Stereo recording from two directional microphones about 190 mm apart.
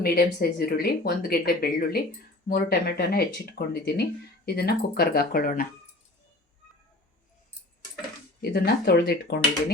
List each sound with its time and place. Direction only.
0.0 s speech: 55° left (ahead or behind)
8.4 s speech: 55° left (ahead or behind)